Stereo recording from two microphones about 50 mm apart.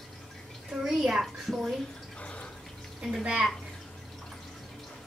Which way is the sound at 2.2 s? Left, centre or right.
Left.